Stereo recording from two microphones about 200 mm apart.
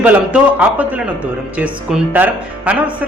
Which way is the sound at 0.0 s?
5° right (ahead or behind).